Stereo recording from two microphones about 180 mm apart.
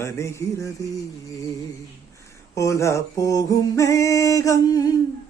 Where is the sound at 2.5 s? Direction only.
15° left (ahead or behind).